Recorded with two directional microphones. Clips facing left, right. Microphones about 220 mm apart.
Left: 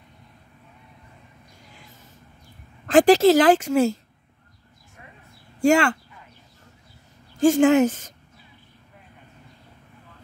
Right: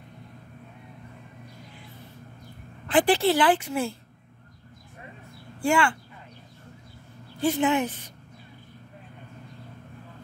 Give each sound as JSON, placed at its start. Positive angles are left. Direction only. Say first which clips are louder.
{"t": 2.9, "sound": "a woman's voice", "louder": "left 7 dB", "side_deg": 45}
{"t": 5.6, "sound": "speech", "louder": "left 6 dB", "side_deg": 40}
{"t": 7.3, "sound": "a woman's voice", "louder": "left 8 dB", "side_deg": 45}